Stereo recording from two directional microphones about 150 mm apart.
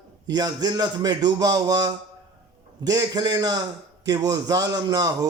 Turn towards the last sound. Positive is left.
turn(degrees=-25)  # may be behind; listen again after turning